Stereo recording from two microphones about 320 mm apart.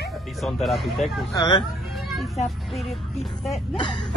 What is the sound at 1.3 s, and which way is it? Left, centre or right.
Speech, centre.